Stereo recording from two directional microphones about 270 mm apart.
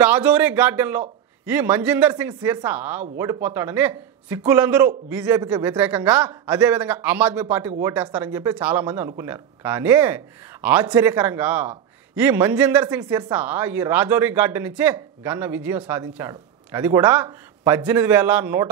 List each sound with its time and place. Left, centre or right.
0.0 s a man's voice: centre